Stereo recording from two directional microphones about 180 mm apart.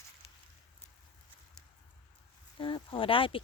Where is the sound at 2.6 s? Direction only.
30° left (ahead or behind).